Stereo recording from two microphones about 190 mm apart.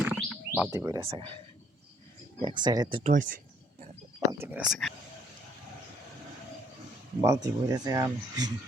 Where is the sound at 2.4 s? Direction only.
25° right (ahead or behind).